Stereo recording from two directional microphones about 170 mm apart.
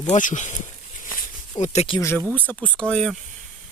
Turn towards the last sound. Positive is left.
turn(degrees=5)  # may be behind; listen again after turning